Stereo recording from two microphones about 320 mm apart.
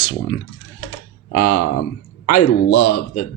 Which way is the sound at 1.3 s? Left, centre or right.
Left.